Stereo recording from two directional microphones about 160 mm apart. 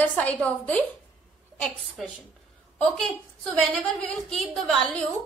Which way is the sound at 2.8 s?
5° left (ahead or behind).